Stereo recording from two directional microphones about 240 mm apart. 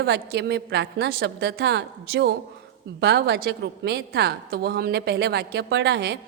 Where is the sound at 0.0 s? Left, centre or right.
Right.